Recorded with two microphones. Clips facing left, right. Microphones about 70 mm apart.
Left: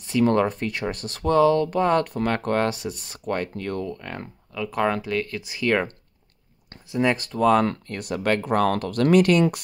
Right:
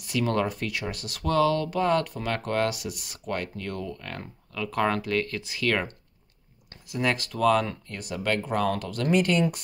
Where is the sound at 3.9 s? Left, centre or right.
Left.